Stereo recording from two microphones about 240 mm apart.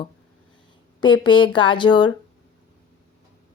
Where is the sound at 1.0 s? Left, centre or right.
Centre.